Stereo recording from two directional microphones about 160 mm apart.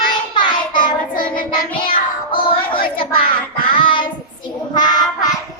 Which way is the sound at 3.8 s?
30° left (ahead or behind).